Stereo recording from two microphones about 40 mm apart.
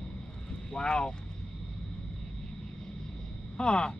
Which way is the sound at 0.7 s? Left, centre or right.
Left.